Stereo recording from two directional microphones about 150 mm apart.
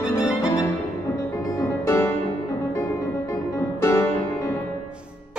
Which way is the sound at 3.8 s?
20° left (ahead or behind).